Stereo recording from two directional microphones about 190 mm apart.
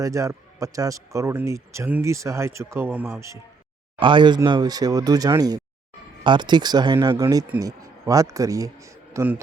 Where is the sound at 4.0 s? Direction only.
25° right (ahead or behind).